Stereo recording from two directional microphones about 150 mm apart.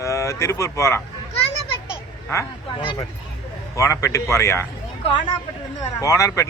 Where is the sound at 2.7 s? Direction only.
35° left (ahead or behind).